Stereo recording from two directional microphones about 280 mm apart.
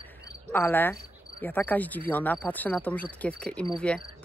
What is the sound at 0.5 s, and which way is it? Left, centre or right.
Cricket, centre.